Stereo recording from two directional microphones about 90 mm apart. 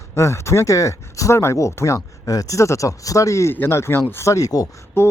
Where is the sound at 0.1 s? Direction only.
30° left (ahead or behind).